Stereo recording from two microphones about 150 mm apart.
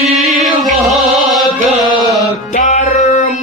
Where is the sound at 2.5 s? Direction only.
55° left (ahead or behind).